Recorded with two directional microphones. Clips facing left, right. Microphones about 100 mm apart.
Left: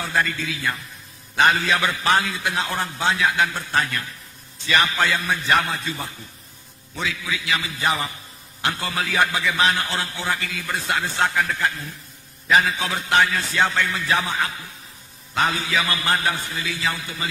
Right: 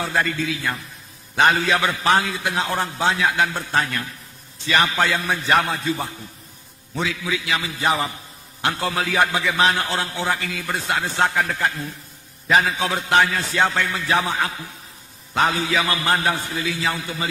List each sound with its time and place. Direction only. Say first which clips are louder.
0.0 s a man's voice: right 2 dB; 35° right (ahead or behind)